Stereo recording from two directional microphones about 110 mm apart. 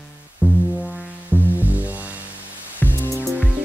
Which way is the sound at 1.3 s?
15° right (ahead or behind).